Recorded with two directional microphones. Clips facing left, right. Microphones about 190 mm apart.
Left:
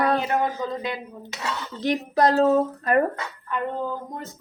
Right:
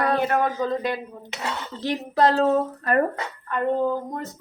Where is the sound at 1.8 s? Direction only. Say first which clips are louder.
Even; 15° left (ahead or behind).